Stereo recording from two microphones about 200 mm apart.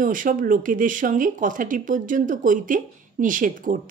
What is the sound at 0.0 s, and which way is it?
Speech, 40° right (ahead or behind).